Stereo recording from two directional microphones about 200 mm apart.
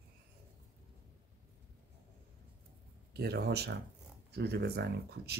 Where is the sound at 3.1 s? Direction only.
55° right (ahead or behind).